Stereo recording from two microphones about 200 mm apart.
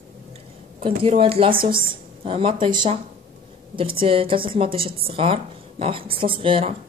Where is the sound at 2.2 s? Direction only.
25° right (ahead or behind).